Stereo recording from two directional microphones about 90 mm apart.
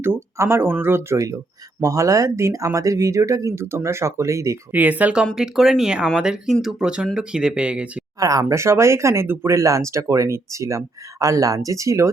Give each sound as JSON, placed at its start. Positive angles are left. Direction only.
{"t": 0.0, "sound": "speech", "side_deg": -25}
{"t": 4.7, "sound": "speech", "side_deg": -20}
{"t": 8.2, "sound": "speech", "side_deg": -40}